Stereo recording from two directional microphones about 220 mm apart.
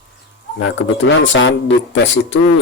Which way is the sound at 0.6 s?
60° left (ahead or behind).